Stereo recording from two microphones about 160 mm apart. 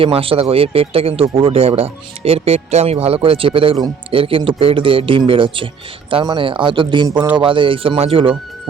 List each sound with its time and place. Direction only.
0.0 s speech: 35° right (ahead or behind)